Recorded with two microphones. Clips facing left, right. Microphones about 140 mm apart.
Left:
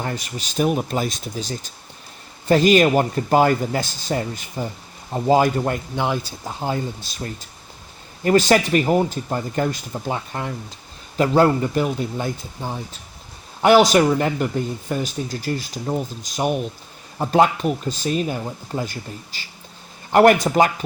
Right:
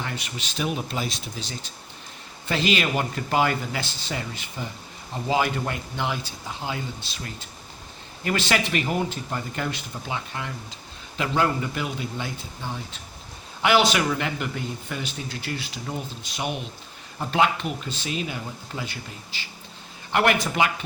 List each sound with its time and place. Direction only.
0.0 s speech: 40° left (ahead or behind)